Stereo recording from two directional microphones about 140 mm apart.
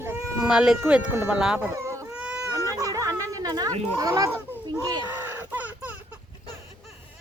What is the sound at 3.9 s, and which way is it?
Speech, 25° right (ahead or behind).